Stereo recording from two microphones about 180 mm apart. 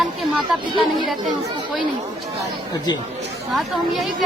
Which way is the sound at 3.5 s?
Centre (ahead or behind).